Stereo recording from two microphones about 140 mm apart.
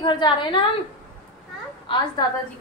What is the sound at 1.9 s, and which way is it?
Speech, 35° left (ahead or behind).